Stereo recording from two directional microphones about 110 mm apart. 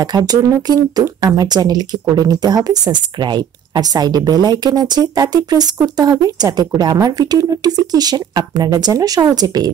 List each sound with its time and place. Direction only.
0.3 s speech: 35° right (ahead or behind)